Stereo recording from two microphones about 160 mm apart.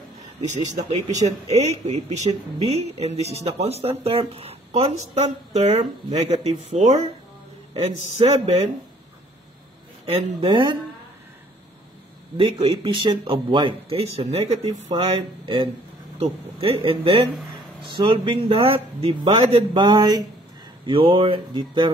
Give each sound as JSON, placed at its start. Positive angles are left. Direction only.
{"t": 0.5, "sound": "speech", "side_deg": -45}
{"t": 10.1, "sound": "speech", "side_deg": -35}
{"t": 12.4, "sound": "speech", "side_deg": -35}